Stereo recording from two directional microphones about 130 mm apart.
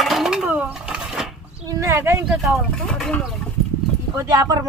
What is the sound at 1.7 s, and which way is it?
Speech, 25° right (ahead or behind).